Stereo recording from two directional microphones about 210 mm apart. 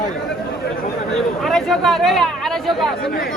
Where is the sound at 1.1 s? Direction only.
Centre (ahead or behind).